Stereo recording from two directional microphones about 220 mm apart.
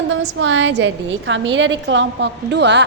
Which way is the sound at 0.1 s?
55° right (ahead or behind).